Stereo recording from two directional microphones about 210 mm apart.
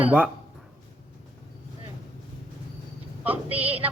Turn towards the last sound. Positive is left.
turn(degrees=-10)  # may be behind; listen again after turning